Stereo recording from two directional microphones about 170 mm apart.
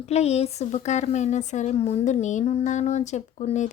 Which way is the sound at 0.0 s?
40° left (ahead or behind).